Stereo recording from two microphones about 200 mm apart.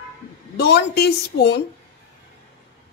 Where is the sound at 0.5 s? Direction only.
55° left (ahead or behind).